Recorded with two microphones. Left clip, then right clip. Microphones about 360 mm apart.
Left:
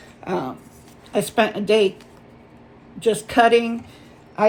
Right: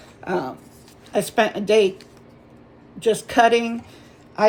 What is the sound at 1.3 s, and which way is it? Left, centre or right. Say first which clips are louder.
Speech: even; centre.